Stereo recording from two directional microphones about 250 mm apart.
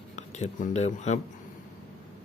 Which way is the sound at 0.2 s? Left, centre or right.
Left.